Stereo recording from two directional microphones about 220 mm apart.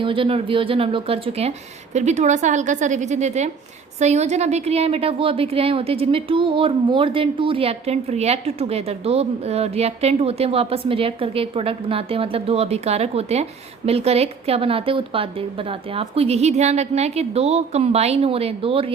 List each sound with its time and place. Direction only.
0.0 s a woman's voice: 25° right (ahead or behind)